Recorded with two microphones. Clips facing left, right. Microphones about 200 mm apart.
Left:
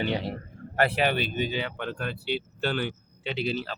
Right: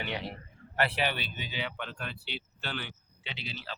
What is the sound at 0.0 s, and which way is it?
Speech, 35° left (ahead or behind).